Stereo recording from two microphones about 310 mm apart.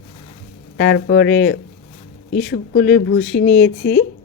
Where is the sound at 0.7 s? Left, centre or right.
Left.